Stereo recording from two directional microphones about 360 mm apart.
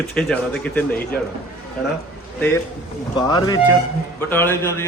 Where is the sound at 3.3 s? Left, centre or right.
Centre.